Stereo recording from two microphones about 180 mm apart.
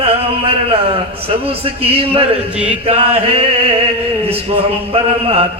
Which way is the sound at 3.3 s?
35° right (ahead or behind).